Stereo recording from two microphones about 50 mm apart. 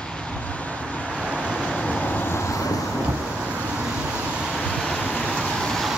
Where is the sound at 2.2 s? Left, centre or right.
Left.